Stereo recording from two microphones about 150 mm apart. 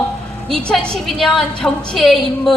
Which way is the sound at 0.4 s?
5° left (ahead or behind).